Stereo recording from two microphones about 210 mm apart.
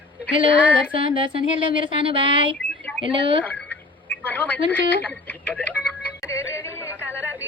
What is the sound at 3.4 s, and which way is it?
Telephone, 10° left (ahead or behind).